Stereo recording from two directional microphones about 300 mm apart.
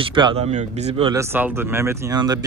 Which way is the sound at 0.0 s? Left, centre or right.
Centre.